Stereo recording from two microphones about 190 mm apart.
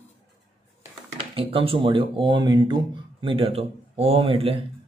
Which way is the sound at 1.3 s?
30° right (ahead or behind).